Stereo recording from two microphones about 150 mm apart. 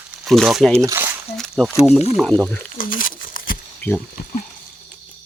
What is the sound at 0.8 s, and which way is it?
Crumpling, 15° right (ahead or behind).